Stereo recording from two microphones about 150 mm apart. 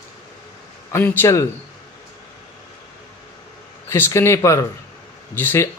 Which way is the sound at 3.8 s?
15° left (ahead or behind).